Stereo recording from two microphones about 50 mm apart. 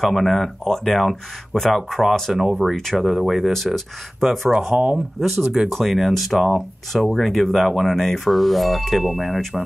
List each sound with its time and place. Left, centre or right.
0.0 s speech: centre
4.5 s speech: centre